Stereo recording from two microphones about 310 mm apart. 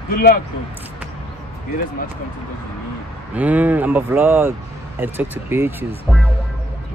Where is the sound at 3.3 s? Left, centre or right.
Centre.